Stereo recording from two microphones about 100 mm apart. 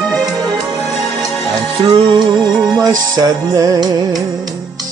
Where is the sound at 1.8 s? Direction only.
60° right (ahead or behind).